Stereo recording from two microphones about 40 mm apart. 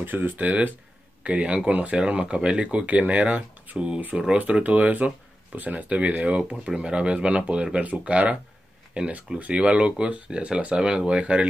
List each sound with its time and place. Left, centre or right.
0.0 s speech: right
0.4 s speech: right